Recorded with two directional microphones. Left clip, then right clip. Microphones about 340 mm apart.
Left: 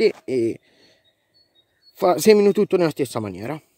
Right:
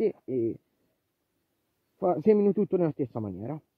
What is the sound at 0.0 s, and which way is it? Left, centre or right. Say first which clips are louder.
Speech: left 9 dB; centre.